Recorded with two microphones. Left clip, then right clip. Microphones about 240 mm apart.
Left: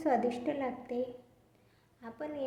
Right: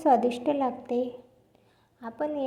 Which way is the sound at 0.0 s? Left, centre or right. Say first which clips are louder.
Right 8 dB; right.